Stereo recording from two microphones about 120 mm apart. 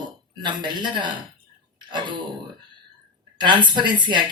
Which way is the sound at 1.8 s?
40° right (ahead or behind).